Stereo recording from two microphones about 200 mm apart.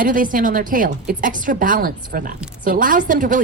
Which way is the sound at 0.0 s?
45° right (ahead or behind).